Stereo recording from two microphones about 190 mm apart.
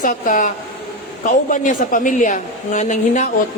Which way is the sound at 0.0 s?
45° left (ahead or behind).